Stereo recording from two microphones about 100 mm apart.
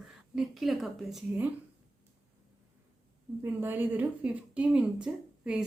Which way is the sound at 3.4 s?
20° right (ahead or behind).